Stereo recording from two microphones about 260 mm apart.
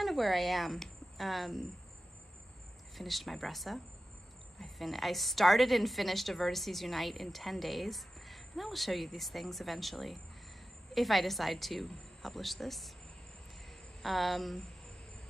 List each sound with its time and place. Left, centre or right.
0.0 s speech: centre
3.0 s a woman's voice: centre
14.0 s a woman's voice: centre